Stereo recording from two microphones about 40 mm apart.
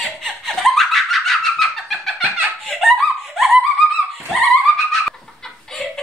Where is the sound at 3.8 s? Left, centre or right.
Centre.